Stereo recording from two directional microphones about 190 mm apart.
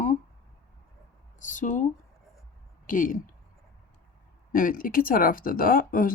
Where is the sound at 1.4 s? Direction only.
45° left (ahead or behind).